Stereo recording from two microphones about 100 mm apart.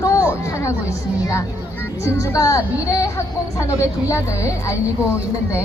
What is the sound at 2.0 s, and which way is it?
A woman's voice, 25° left (ahead or behind).